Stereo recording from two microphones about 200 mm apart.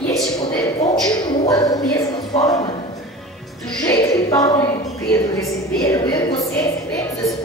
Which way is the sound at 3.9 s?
15° left (ahead or behind).